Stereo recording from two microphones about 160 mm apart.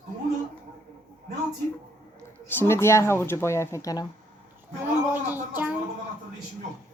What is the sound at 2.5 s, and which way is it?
Speech, 15° left (ahead or behind).